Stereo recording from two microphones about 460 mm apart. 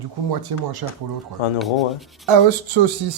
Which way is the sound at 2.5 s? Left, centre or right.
Right.